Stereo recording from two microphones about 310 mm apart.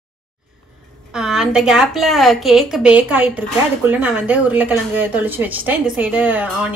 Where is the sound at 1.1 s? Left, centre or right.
Centre.